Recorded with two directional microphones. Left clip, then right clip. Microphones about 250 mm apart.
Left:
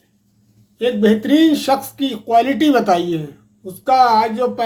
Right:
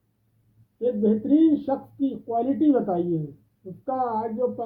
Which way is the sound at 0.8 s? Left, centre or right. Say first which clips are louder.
Left 8 dB; centre.